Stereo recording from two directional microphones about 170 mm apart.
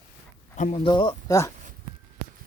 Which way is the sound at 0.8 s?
30° left (ahead or behind).